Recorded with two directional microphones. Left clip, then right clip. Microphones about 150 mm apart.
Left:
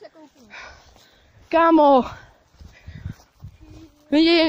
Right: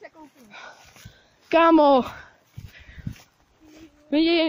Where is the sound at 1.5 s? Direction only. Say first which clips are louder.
Left 2 dB; centre (ahead or behind).